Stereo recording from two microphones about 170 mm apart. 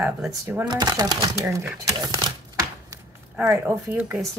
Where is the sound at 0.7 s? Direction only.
25° right (ahead or behind).